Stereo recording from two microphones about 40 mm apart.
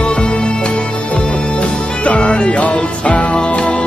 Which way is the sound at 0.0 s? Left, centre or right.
Left.